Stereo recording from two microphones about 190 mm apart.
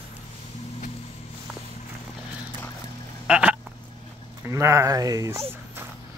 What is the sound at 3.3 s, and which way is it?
Frog, 5° right (ahead or behind).